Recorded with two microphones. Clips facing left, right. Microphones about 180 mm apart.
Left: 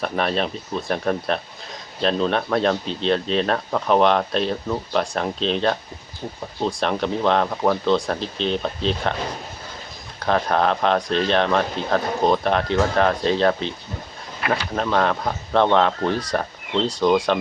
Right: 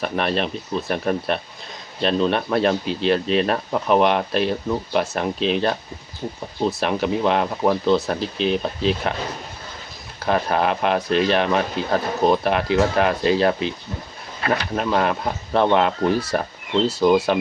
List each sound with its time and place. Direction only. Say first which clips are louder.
0.0 s speech: even; centre (ahead or behind)
10.2 s speech: even; 5° right (ahead or behind)
14.4 s speech: right 1 dB; 30° right (ahead or behind)
14.8 s speech: left 2 dB; 5° right (ahead or behind)